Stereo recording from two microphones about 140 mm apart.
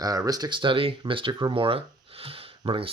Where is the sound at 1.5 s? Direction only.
40° right (ahead or behind).